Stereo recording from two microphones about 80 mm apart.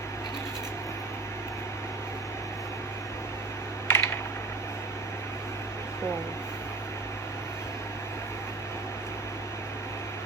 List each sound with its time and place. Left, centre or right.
3.8 s typing: left